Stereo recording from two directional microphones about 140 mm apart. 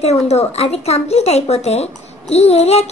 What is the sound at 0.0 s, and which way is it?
A woman's voice, 50° left (ahead or behind).